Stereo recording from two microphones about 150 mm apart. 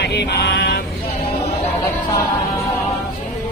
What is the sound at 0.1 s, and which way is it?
Vehicle, 90° left.